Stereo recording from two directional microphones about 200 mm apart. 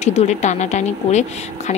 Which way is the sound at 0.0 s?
35° left (ahead or behind).